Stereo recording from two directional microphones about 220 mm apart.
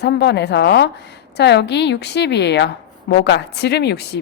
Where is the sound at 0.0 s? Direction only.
50° left (ahead or behind).